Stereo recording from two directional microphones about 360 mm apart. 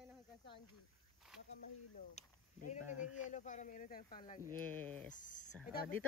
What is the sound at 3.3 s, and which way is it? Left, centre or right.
Speech, centre.